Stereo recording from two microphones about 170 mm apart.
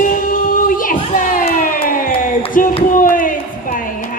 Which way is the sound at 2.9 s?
55° left (ahead or behind).